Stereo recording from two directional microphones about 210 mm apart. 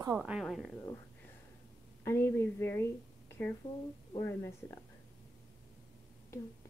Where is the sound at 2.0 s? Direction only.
10° left (ahead or behind).